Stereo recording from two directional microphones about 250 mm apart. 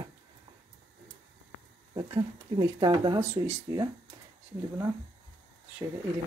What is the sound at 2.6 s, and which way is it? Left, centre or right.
Speech, centre.